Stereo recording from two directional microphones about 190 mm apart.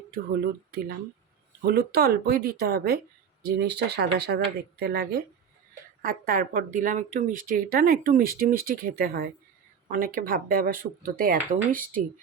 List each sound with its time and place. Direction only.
0.7 s speech: 55° right (ahead or behind)